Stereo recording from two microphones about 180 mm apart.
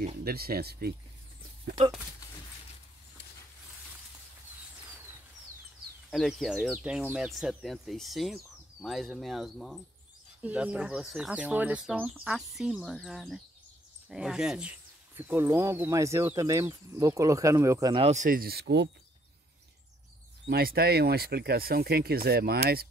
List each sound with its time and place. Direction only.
0.2 s speech: 60° right (ahead or behind)
6.0 s speech: centre (ahead or behind); by 18.0 s 20° right (ahead or behind)
18.0 s speech: 40° right (ahead or behind); by 18.9 s 70° right (ahead or behind)
20.4 s speech: 60° right (ahead or behind)